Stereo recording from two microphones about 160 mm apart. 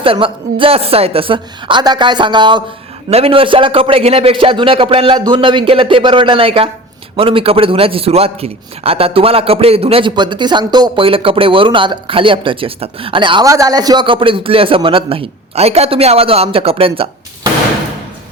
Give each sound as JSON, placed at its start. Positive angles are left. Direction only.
{"t": 0.0, "sound": "a man's voice", "side_deg": -35}